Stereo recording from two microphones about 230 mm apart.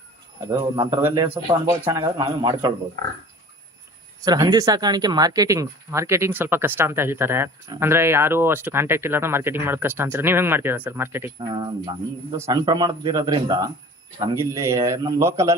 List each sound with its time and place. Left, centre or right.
0.4 s speech: centre
4.2 s speech: centre